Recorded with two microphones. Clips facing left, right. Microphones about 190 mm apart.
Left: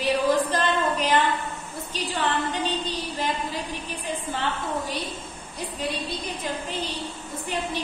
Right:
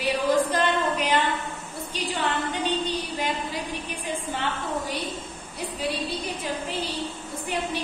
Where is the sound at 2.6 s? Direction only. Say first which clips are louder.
Right 1 dB; 10° right (ahead or behind).